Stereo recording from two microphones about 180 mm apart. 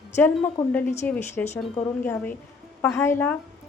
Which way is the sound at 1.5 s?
35° left (ahead or behind).